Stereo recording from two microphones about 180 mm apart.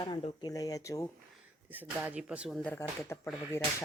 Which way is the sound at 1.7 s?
10° right (ahead or behind).